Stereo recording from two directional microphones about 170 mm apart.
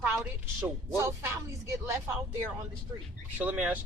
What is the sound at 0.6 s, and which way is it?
Speech, 15° right (ahead or behind).